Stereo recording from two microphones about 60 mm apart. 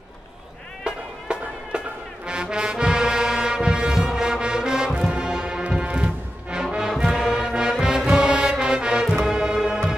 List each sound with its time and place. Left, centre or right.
0.8 s music: centre